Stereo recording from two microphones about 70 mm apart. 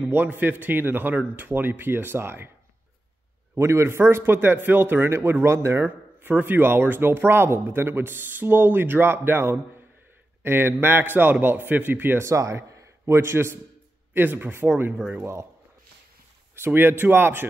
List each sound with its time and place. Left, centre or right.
0.1 s a man's voice: right
3.5 s speech: right
5.9 s speech: right
12.3 s a man's voice: right
16.5 s speech: right